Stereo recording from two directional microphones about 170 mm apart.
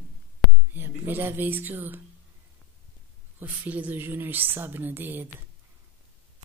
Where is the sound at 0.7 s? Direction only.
10° right (ahead or behind).